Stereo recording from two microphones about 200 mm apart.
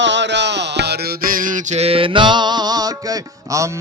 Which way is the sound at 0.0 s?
65° right (ahead or behind).